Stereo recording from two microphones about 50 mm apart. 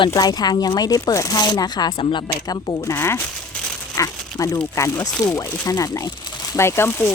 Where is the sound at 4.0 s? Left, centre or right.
Left.